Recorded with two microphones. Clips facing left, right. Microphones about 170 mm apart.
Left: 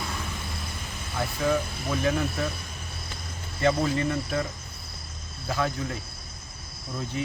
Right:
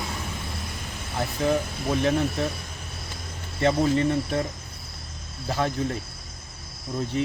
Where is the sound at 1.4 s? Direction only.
30° right (ahead or behind).